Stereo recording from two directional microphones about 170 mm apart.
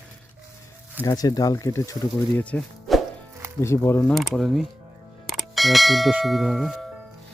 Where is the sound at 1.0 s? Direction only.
20° left (ahead or behind).